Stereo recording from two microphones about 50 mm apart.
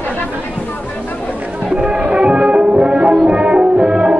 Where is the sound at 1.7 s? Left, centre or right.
Right.